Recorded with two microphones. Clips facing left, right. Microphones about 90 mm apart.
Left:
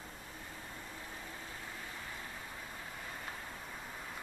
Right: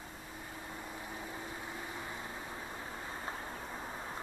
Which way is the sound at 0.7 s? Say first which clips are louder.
Right 4 dB; 20° right (ahead or behind).